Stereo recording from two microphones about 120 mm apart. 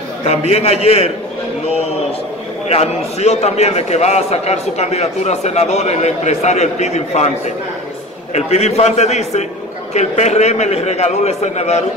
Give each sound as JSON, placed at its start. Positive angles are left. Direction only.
{"t": 0.3, "sound": "a man's voice", "side_deg": 60}
{"t": 2.7, "sound": "a man's voice", "side_deg": 65}